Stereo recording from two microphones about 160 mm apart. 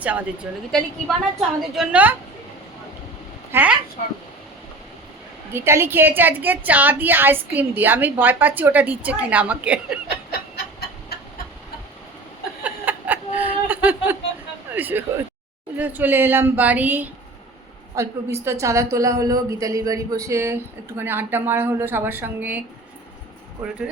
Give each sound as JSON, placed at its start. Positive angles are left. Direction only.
{"t": 0.7, "sound": "a woman's voice", "side_deg": 0}
{"t": 3.5, "sound": "a woman's voice", "side_deg": -10}
{"t": 5.5, "sound": "a woman's voice", "side_deg": -15}
{"t": 10.5, "sound": "a sound", "side_deg": 80}
{"t": 12.6, "sound": "a sound", "side_deg": -10}
{"t": 14.8, "sound": "a woman's voice", "side_deg": -10}